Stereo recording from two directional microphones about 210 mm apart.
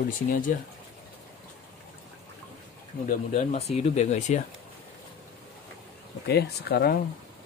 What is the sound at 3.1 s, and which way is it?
Speech, 30° left (ahead or behind).